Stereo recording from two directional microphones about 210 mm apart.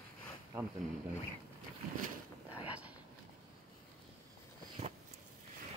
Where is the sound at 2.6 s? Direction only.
5° right (ahead or behind).